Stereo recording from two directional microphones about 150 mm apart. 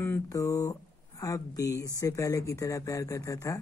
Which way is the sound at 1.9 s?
20° left (ahead or behind).